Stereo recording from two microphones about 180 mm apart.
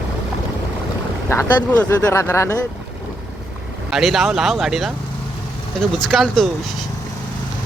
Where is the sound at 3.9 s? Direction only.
Centre (ahead or behind).